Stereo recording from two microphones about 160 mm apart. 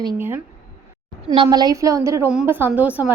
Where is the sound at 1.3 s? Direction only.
30° right (ahead or behind); by 3.0 s 10° right (ahead or behind).